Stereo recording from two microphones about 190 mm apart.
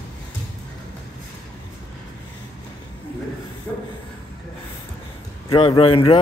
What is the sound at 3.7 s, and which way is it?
Train, 5° left (ahead or behind).